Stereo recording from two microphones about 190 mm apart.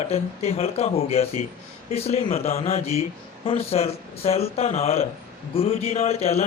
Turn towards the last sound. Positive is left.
turn(degrees=35)  # may be behind; listen again after turning